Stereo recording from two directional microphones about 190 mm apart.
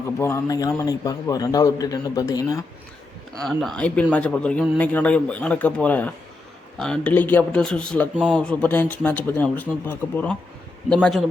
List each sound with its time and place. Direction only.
0.2 s a man's voice: 15° left (ahead or behind)
3.4 s a man's voice: 5° left (ahead or behind)